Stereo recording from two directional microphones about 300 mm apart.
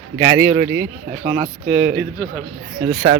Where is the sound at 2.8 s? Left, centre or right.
Right.